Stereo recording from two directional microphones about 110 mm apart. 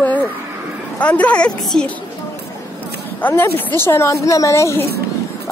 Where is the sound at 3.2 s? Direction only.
15° left (ahead or behind).